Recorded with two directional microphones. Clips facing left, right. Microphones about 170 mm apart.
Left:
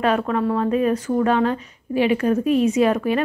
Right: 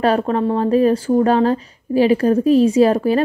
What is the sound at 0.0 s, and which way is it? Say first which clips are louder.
A woman's voice: right 3 dB; 35° right (ahead or behind).